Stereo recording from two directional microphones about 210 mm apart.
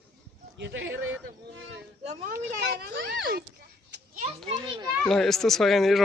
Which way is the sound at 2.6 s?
50° right (ahead or behind).